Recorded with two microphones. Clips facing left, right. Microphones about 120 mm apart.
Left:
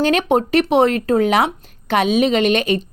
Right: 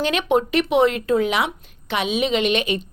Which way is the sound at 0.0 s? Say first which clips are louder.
Left 4 dB; 40° left (ahead or behind).